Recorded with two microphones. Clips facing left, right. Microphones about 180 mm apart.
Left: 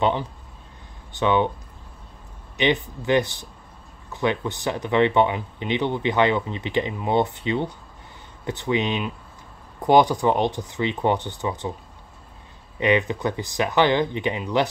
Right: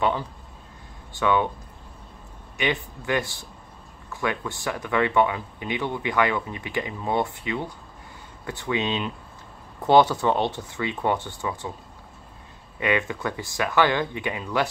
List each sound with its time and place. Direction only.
0.0 s speech: 20° left (ahead or behind)
2.5 s speech: 20° left (ahead or behind)
12.7 s speech: 20° left (ahead or behind)